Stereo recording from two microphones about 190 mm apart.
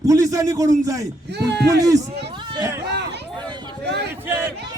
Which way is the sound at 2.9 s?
60° right (ahead or behind).